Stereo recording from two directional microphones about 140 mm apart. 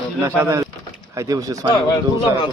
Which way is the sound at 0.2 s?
20° right (ahead or behind).